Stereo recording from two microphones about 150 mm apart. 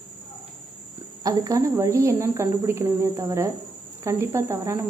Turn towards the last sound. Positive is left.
turn(degrees=-20)  # may be behind; listen again after turning